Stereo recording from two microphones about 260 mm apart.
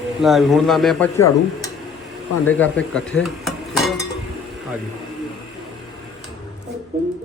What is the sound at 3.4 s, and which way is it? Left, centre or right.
Cutlery, centre.